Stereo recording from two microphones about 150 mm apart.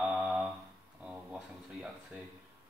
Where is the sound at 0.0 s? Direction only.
5° right (ahead or behind).